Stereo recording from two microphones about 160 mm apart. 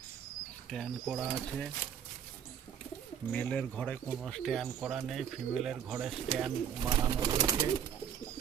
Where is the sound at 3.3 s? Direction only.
5° left (ahead or behind).